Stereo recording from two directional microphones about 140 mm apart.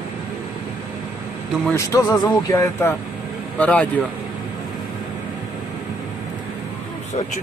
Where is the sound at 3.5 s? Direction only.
10° left (ahead or behind).